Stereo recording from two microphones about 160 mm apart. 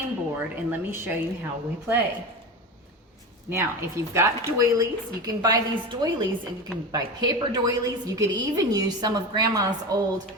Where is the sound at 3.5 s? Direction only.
15° right (ahead or behind).